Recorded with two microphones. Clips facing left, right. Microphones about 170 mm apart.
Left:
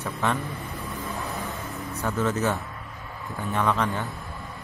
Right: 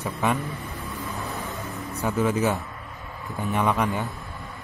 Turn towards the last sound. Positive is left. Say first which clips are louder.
# right 1 dB
turn(degrees=-15)  # may be behind; listen again after turning